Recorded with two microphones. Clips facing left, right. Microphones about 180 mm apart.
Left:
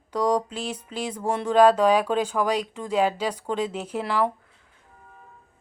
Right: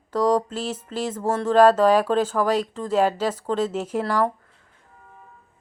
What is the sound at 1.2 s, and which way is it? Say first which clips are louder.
Speech: right 2 dB; 15° left (ahead or behind).